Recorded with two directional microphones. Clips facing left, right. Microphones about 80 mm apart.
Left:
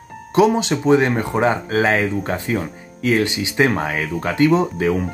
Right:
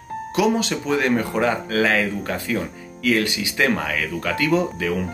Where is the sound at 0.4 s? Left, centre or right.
Left.